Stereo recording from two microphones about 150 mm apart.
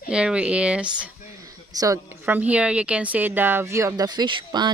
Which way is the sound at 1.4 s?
25° right (ahead or behind).